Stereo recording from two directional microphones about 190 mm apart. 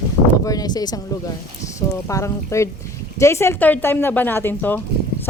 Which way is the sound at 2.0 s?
15° left (ahead or behind).